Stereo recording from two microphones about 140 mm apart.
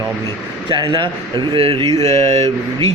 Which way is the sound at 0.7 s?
35° right (ahead or behind).